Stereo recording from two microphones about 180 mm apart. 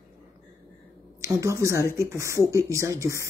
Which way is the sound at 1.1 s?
15° right (ahead or behind).